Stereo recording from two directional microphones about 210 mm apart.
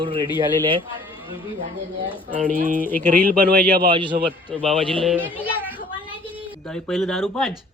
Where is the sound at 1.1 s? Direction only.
25° left (ahead or behind).